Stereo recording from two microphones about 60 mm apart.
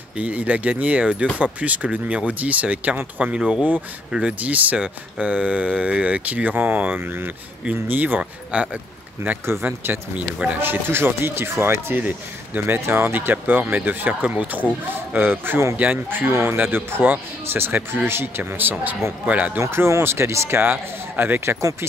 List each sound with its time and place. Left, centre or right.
0.2 s speech: right
9.5 s speech: right
10.6 s speech: right
15.1 s speech: right
19.2 s speech: right
19.6 s speech: right
21.5 s speech: right